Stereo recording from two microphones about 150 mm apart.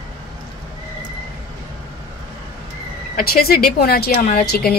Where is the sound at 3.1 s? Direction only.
80° left.